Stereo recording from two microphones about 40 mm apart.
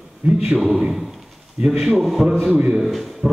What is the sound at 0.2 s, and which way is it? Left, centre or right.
Speech, right.